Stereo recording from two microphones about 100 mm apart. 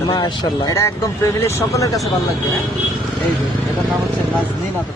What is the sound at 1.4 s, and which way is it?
Speech, 30° left (ahead or behind).